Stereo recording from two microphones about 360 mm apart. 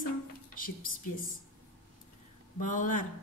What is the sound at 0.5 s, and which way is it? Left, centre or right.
Speech, left.